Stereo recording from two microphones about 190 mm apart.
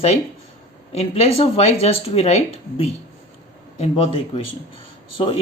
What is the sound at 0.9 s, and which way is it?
Speech, 35° left (ahead or behind).